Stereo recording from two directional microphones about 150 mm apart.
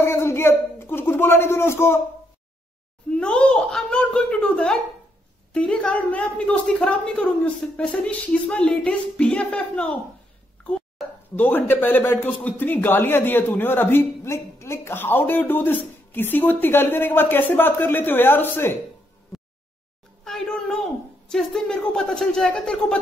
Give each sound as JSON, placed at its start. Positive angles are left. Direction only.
{"t": 0.0, "sound": "speech", "side_deg": 15}
{"t": 3.1, "sound": "a child's voice", "side_deg": 5}
{"t": 11.3, "sound": "speech", "side_deg": 15}
{"t": 20.2, "sound": "a woman's voice", "side_deg": 5}